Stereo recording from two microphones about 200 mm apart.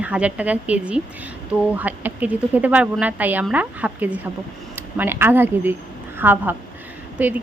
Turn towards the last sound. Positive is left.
turn(degrees=-5)  # may be behind; listen again after turning